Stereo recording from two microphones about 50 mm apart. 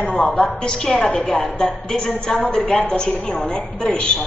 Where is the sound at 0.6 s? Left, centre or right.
Centre.